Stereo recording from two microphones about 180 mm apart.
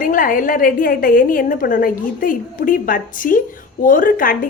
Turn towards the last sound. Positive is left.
turn(degrees=50)  # may be behind; listen again after turning